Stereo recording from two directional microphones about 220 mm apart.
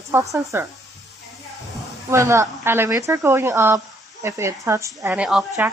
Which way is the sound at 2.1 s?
15° right (ahead or behind).